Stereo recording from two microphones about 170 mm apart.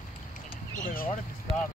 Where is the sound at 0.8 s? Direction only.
60° left (ahead or behind).